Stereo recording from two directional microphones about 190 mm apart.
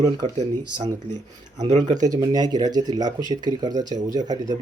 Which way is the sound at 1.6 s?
35° right (ahead or behind).